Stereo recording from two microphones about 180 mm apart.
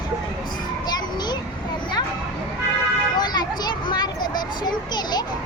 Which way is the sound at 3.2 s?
25° left (ahead or behind).